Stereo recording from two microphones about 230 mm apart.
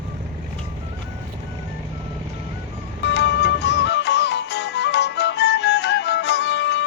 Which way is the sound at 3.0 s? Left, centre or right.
Left.